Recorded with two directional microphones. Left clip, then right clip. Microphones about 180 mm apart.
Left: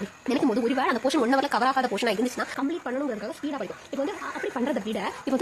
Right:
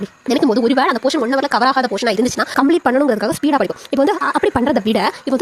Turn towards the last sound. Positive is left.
turn(degrees=-55)  # may be behind; listen again after turning